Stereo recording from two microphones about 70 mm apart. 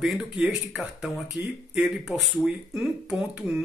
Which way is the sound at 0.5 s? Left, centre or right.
Centre.